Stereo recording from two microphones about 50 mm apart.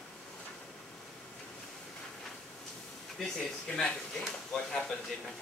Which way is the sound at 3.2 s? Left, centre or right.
Centre.